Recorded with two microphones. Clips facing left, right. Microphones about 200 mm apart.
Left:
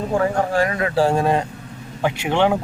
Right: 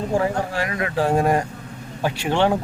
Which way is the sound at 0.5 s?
45° left (ahead or behind).